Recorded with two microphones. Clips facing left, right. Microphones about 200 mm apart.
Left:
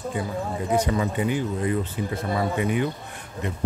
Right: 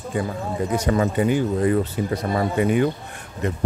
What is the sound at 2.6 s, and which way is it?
Speech, 50° right (ahead or behind).